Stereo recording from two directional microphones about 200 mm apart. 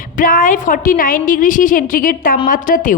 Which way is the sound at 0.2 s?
45° left (ahead or behind).